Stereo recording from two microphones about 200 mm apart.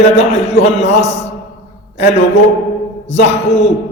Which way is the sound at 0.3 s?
30° left (ahead or behind).